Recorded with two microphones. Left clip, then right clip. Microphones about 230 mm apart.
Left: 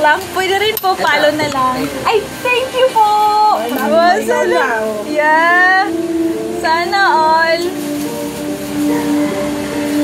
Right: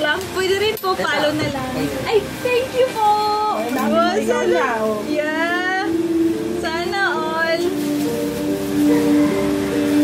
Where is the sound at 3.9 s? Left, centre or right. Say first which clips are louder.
Left 7 dB; centre.